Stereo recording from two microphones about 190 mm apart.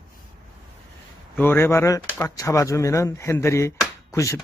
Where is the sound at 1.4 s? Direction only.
10° left (ahead or behind).